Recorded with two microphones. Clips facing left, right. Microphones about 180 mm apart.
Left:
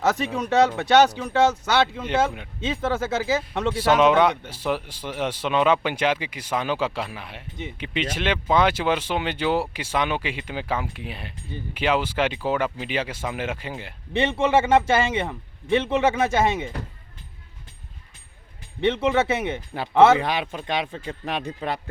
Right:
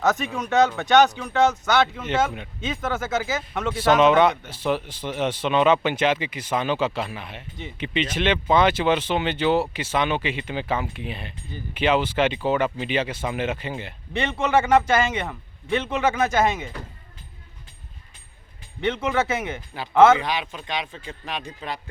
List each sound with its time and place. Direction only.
0.1 s speech: 30° left (ahead or behind)
3.8 s speech: 10° left (ahead or behind)
7.5 s speech: 20° left (ahead or behind)
14.1 s speech: 30° left (ahead or behind)
18.8 s speech: 30° left (ahead or behind)
20.2 s speech: 55° left (ahead or behind)